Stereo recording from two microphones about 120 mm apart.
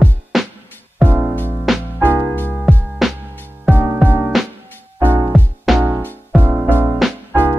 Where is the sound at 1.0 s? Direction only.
15° right (ahead or behind).